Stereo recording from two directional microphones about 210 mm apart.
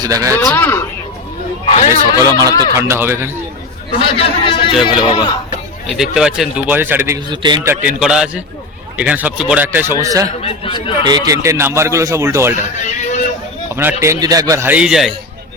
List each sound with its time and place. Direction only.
0.0 s speech: 15° right (ahead or behind)
0.4 s speech: 10° left (ahead or behind)
1.6 s a sound: 35° left (ahead or behind)
1.9 s speech: 15° right (ahead or behind)
4.2 s a man's voice: 25° left (ahead or behind)
6.0 s speech: 5° right (ahead or behind)
7.3 s speech: 20° right (ahead or behind)
10.4 s a man's voice: 25° left (ahead or behind)
11.0 s speech: 20° right (ahead or behind)
12.7 s a sound: 35° left (ahead or behind)
14.0 s speech: 15° right (ahead or behind)